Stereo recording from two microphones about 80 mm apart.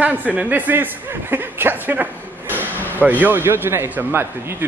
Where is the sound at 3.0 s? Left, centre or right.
Right.